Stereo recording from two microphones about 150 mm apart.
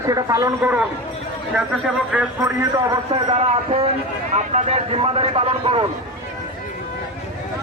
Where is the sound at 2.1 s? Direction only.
5° right (ahead or behind).